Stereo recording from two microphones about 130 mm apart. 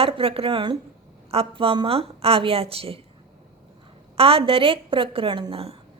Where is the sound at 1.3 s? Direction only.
45° right (ahead or behind).